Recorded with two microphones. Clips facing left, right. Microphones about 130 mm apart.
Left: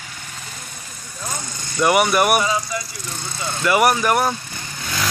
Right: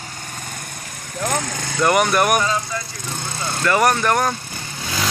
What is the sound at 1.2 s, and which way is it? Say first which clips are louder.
Vehicle: right 8 dB; 85° right.